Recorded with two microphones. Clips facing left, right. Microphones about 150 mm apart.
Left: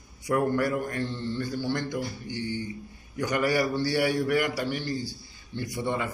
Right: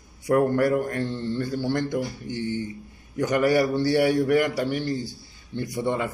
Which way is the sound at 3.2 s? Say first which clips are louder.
Right 5 dB; 45° right (ahead or behind).